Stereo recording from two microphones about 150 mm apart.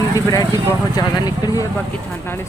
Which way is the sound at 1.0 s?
25° left (ahead or behind).